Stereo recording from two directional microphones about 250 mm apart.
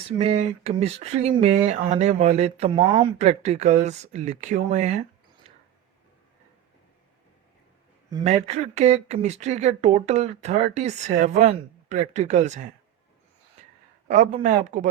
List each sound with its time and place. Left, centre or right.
0.2 s speech: right
5.5 s a sound: right
8.1 s speech: right
14.1 s speech: right